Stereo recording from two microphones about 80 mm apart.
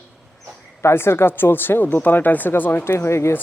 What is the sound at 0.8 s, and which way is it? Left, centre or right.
Speech, left.